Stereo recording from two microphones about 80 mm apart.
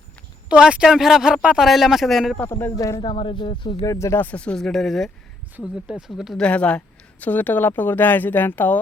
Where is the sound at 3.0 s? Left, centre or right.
Left.